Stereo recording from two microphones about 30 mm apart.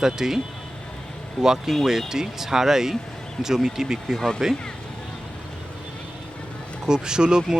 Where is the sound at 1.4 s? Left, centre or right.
Centre.